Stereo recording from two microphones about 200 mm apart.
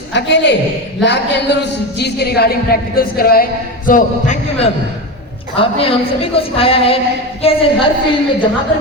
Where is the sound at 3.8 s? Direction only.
40° left (ahead or behind).